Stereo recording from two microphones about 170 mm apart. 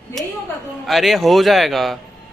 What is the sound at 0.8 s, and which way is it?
A man's voice, centre (ahead or behind).